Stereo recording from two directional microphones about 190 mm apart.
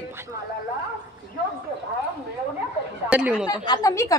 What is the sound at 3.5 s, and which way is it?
Speech, 20° left (ahead or behind).